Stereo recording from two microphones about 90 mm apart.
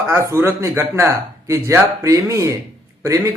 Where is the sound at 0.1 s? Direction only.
30° right (ahead or behind).